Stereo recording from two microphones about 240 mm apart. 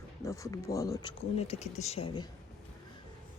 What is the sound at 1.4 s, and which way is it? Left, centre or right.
Speech, left.